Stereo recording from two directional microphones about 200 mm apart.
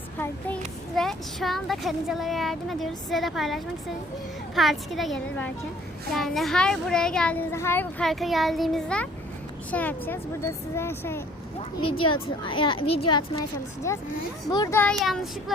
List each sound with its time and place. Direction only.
0.2 s speech: 5° left (ahead or behind)
11.8 s speech: 25° left (ahead or behind); by 15.5 s centre (ahead or behind)